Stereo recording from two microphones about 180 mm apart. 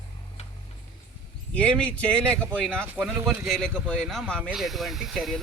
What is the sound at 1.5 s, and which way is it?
Speech, 5° left (ahead or behind).